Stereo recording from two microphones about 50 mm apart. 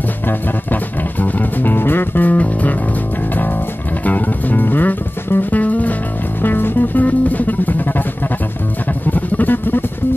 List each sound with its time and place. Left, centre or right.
1.2 s music: left
4.0 s music: left
6.4 s music: left
9.1 s music: left